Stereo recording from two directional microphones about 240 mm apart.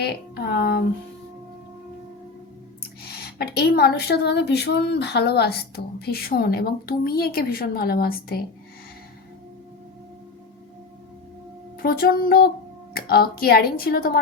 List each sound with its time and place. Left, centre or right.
0.0 s speech: left
3.0 s speech: left
11.8 s speech: left